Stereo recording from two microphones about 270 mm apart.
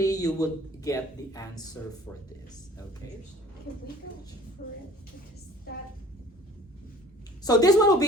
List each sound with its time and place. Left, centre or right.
0.0 s a sound: centre
0.3 s speech: centre
4.6 s speech: left
7.4 s speech: centre